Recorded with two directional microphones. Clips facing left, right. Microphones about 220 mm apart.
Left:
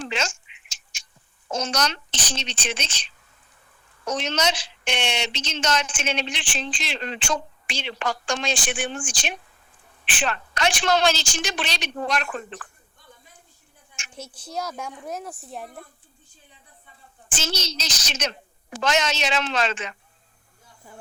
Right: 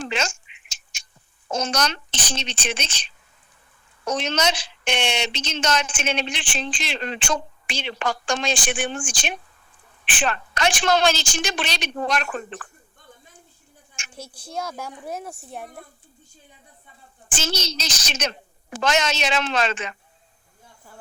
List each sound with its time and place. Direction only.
0.0 s duck: 50° right (ahead or behind)
1.5 s a child's voice: 55° right (ahead or behind)
4.3 s a woman's voice: 50° right (ahead or behind)
14.0 s a child's voice: 50° right (ahead or behind)
14.7 s speech: centre (ahead or behind)
17.3 s a woman's voice: 55° right (ahead or behind)